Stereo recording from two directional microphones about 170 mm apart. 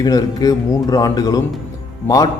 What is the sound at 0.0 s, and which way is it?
A man's voice, 20° left (ahead or behind).